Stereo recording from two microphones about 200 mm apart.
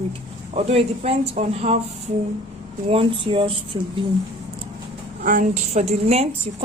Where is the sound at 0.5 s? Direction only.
30° right (ahead or behind).